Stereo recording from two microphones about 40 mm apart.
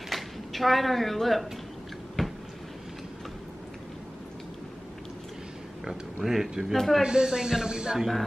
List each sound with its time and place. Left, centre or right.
0.1 s speech: centre
2.2 s a sound: centre
6.2 s speech: centre
7.0 s speech: centre